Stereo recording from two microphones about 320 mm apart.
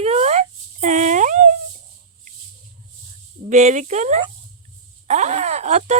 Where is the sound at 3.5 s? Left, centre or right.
Right.